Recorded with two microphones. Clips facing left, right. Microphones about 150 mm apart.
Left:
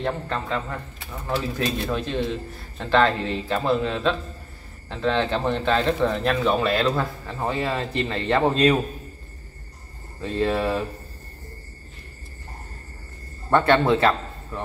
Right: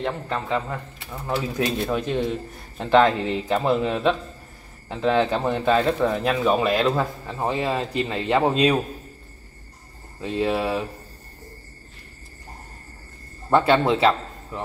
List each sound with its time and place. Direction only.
0.0 s speech: 10° right (ahead or behind)
1.9 s speech: 15° right (ahead or behind)
10.2 s speech: 10° right (ahead or behind)
13.5 s a man's voice: 10° right (ahead or behind)